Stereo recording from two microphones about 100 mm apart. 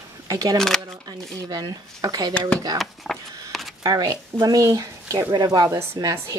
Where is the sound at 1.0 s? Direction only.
40° right (ahead or behind).